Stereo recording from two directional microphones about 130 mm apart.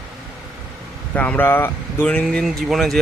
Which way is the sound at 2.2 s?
Centre (ahead or behind).